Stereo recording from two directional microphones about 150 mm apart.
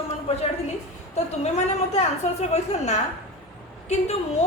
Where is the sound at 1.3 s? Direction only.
45° left (ahead or behind).